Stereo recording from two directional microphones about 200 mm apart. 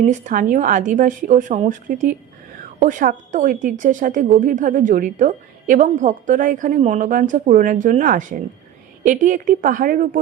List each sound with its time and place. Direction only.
0.0 s speech: 40° right (ahead or behind)